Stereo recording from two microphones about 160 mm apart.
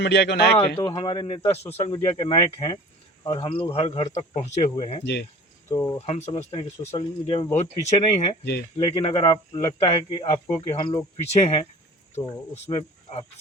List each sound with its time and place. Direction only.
0.0 s speech: 90° left
0.8 s speech: 30° left (ahead or behind)
5.7 s speech: 20° left (ahead or behind)
6.1 s speech: 45° left (ahead or behind)
6.3 s speech: 35° left (ahead or behind)
12.6 s speech: 40° left (ahead or behind)